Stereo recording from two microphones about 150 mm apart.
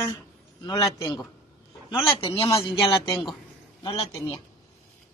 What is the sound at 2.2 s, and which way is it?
A man's voice, 40° left (ahead or behind).